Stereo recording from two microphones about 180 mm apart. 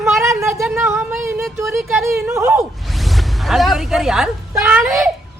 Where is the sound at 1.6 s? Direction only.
15° right (ahead or behind).